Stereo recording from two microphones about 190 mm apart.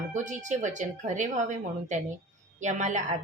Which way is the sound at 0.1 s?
40° right (ahead or behind).